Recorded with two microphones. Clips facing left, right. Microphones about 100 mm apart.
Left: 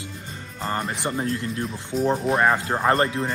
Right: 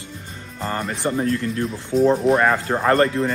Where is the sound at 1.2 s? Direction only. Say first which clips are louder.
Right 5 dB; 30° left (ahead or behind).